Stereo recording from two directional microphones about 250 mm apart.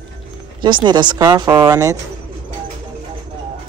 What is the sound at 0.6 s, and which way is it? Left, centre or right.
Speech, centre.